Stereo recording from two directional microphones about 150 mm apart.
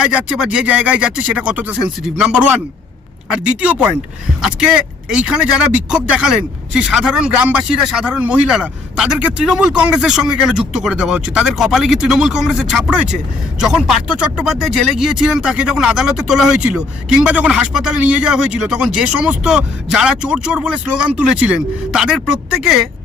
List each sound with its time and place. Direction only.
0.0 s speech: 5° right (ahead or behind)